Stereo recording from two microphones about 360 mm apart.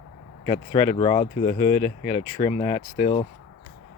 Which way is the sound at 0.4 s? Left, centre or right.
Centre.